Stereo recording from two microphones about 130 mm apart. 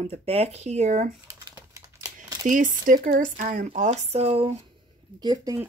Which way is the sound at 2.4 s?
85° right.